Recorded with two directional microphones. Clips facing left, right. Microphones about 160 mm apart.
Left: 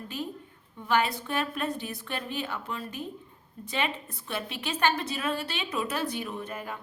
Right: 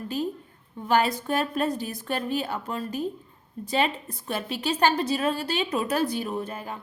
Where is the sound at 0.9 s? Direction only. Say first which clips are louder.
Right 4 dB; 40° right (ahead or behind).